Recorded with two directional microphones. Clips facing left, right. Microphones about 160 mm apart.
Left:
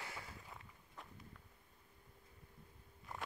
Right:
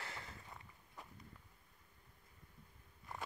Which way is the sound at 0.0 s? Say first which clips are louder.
Even; 10° left (ahead or behind).